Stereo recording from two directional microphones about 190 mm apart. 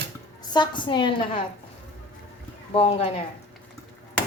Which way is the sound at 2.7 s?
30° left (ahead or behind).